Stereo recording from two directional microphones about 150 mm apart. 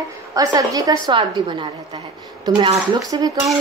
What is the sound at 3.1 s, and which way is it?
Speech, 30° right (ahead or behind).